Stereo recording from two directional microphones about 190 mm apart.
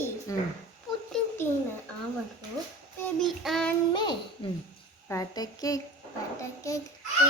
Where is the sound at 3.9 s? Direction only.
25° left (ahead or behind).